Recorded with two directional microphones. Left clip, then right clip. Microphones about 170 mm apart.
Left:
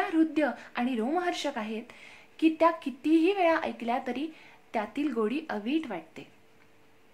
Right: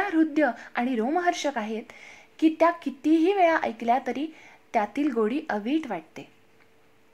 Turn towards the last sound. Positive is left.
turn(degrees=-35)  # may be behind; listen again after turning